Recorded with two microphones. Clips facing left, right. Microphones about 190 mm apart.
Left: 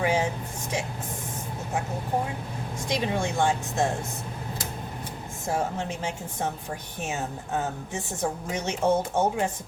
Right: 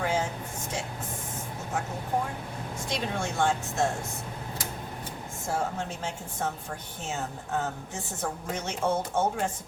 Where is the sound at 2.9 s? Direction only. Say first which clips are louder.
Left 5 dB; 15° left (ahead or behind).